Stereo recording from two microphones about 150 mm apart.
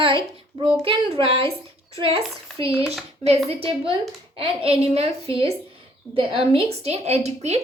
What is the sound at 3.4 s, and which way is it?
Speech, 40° right (ahead or behind).